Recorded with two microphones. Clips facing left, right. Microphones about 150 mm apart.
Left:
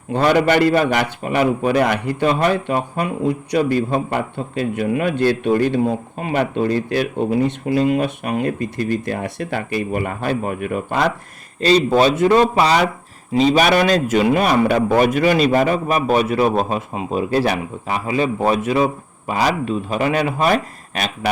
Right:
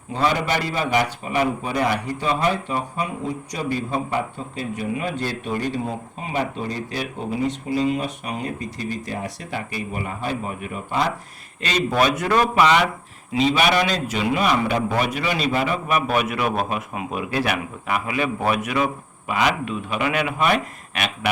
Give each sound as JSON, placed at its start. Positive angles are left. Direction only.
{"t": 0.1, "sound": "speech", "side_deg": 70}
{"t": 11.9, "sound": "a man's voice", "side_deg": 25}